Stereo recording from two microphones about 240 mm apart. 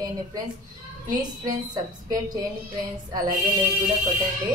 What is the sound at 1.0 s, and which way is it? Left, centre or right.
A woman's voice, centre.